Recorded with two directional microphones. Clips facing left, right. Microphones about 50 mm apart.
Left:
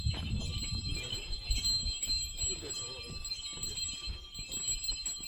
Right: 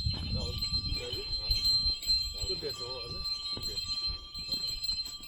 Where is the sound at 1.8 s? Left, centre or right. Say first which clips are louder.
Right 6 dB; left.